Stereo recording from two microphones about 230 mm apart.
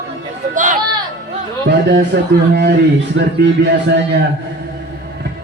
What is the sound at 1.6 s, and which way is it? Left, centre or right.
Speech, right.